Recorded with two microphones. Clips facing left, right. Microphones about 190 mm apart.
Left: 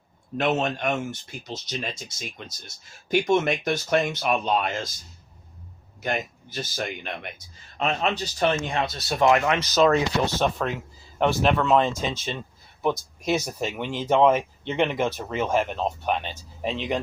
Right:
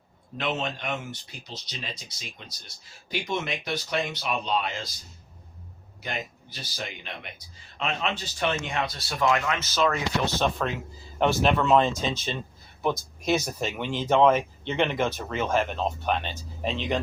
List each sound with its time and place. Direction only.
0.3 s speech: 45° left (ahead or behind)
6.0 s speech: 50° left (ahead or behind)
9.0 s speech: 20° left (ahead or behind)
9.4 s speech: 35° left (ahead or behind)
10.4 s speech: 5° left (ahead or behind)
13.2 s speech: 5° left (ahead or behind)